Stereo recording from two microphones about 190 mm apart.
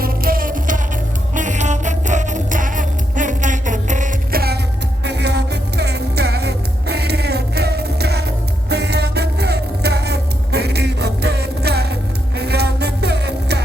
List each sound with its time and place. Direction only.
0.0 s music: 50° right (ahead or behind)